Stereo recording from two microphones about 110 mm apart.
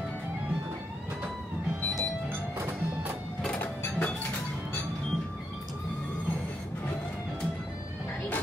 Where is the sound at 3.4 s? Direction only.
10° left (ahead or behind).